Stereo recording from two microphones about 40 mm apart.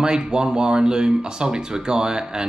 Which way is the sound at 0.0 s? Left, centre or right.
Centre.